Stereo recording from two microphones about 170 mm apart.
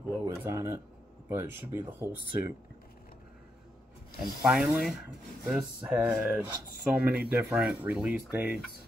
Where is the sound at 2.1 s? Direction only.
65° left (ahead or behind).